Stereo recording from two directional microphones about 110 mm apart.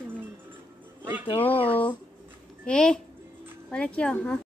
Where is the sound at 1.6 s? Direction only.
15° left (ahead or behind).